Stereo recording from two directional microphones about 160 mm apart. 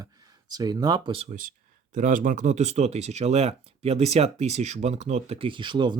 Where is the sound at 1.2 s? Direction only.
55° right (ahead or behind).